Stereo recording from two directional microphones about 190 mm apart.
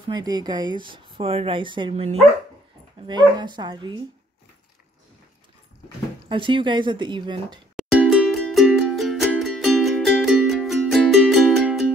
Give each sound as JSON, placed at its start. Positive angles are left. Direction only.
{"t": 0.0, "sound": "speech", "side_deg": -20}
{"t": 6.2, "sound": "speech", "side_deg": -25}
{"t": 7.7, "sound": "music", "side_deg": 0}